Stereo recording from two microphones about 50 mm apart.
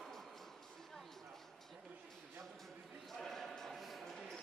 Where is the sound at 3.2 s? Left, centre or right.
Centre.